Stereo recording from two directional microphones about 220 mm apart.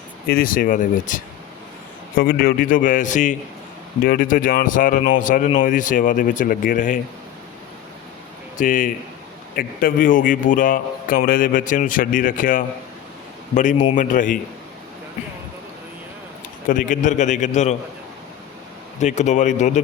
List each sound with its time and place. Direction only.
0.3 s a man's voice: 40° left (ahead or behind)
8.5 s a man's voice: 35° left (ahead or behind)
16.6 s a man's voice: 35° left (ahead or behind)
18.9 s a man's voice: 30° left (ahead or behind)